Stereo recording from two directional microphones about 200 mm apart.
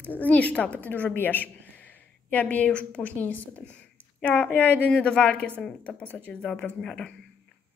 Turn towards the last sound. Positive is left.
turn(degrees=5)  # may be behind; listen again after turning